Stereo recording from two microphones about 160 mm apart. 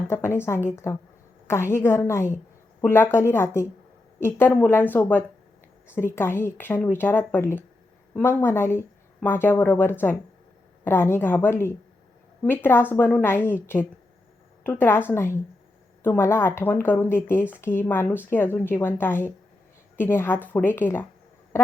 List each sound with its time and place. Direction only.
0.1 s a woman's voice: 15° left (ahead or behind)